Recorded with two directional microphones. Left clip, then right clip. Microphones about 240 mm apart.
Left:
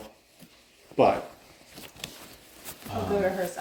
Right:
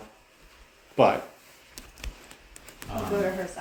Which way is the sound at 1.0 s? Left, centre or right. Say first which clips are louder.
Right 1 dB; right.